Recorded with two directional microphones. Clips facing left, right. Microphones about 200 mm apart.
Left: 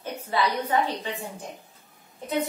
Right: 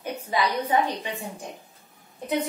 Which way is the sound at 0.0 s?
15° right (ahead or behind).